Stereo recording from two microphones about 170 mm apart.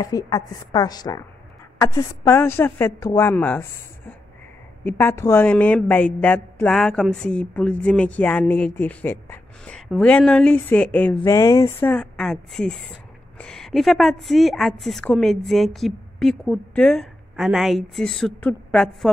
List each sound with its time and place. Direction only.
0.0 s a woman's voice: 20° left (ahead or behind)
11.9 s a woman's voice: 5° left (ahead or behind)